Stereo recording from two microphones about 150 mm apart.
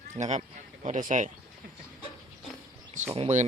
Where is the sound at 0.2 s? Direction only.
50° right (ahead or behind).